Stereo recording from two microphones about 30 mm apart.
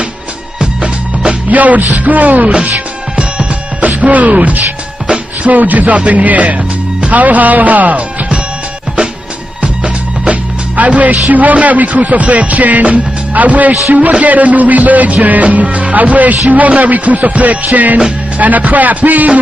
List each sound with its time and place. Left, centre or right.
0.6 s music: right
1.5 s music: right
3.8 s speech: right
5.0 s music: right
5.5 s music: right
10.2 s music: right